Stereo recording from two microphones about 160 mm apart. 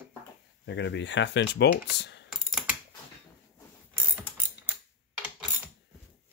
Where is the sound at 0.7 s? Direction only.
90° left.